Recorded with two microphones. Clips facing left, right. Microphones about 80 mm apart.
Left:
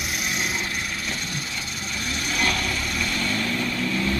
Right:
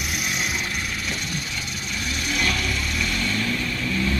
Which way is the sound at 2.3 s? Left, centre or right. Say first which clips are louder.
Left 1 dB; left.